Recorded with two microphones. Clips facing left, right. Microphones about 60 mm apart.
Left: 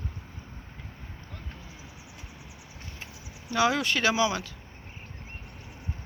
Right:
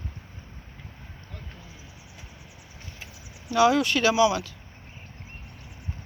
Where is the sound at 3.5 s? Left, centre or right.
Left.